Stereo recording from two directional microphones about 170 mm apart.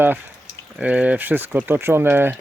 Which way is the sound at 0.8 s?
10° right (ahead or behind).